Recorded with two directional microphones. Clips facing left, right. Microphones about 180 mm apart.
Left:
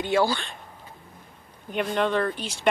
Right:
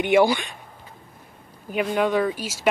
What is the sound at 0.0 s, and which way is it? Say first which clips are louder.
Speech: right 5 dB; 20° right (ahead or behind).